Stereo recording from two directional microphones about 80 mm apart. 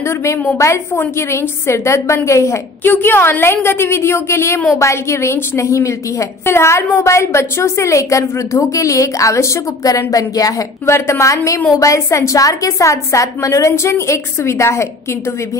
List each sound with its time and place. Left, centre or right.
0.6 s a woman's voice: left